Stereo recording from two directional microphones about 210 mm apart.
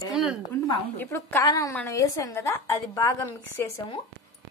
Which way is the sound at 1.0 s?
10° left (ahead or behind).